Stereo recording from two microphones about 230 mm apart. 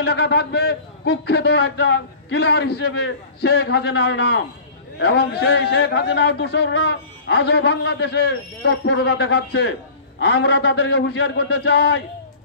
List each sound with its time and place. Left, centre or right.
0.0 s a man's voice: left